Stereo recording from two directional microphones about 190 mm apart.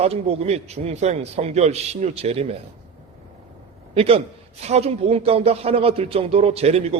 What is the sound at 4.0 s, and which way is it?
A man's voice, 30° right (ahead or behind).